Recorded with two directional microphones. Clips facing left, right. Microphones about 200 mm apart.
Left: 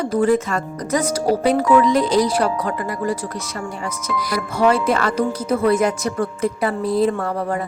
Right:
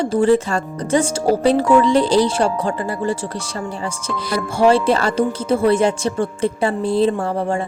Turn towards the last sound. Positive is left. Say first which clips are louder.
# right 2 dB
turn(degrees=-25)  # may be behind; listen again after turning